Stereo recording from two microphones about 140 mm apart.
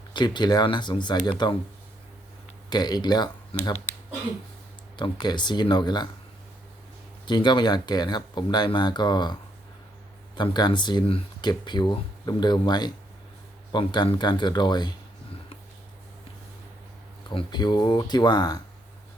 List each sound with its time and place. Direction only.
0.1 s speech: 30° left (ahead or behind)
2.6 s speech: 30° left (ahead or behind)
3.5 s speech: 40° left (ahead or behind)
4.9 s speech: 35° left (ahead or behind)
7.3 s speech: 35° left (ahead or behind)
17.2 s speech: 30° left (ahead or behind)